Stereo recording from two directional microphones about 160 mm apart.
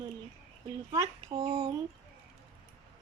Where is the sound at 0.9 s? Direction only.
25° right (ahead or behind).